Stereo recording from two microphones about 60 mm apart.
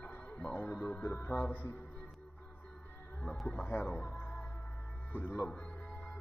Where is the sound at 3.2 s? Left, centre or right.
Centre.